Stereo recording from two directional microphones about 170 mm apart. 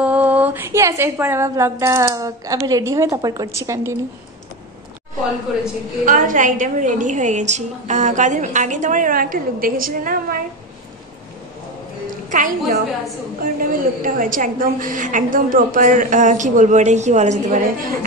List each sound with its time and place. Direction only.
0.0 s a woman's voice: 10° right (ahead or behind)
5.5 s a woman's voice: centre (ahead or behind)
6.0 s a woman's voice: 50° right (ahead or behind)
12.3 s a woman's voice: 50° right (ahead or behind)